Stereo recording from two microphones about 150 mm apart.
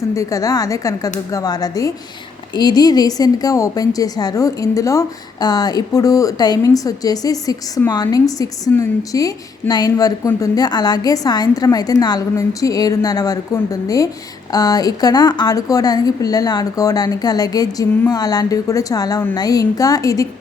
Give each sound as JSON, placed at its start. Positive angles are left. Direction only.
{"t": 0.1, "sound": "a woman's voice", "side_deg": 20}